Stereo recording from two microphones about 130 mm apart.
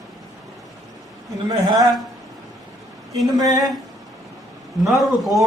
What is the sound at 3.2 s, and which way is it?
Speech, 25° right (ahead or behind).